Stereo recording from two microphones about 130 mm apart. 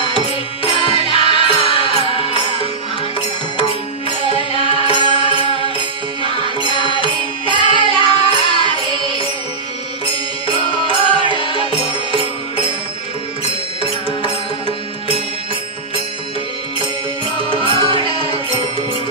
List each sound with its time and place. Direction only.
0.7 s music: 45° left (ahead or behind)
4.2 s music: 45° left (ahead or behind)
6.7 s mantra: 40° right (ahead or behind)
7.4 s music: 40° right (ahead or behind)
7.9 s music: 45° left (ahead or behind)
8.5 s music: 35° right (ahead or behind)
11.1 s music: 40° left (ahead or behind)
17.6 s music: 40° right (ahead or behind)